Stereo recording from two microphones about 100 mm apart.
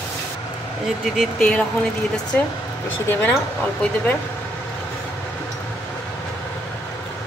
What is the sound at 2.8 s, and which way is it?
Speech, 15° left (ahead or behind).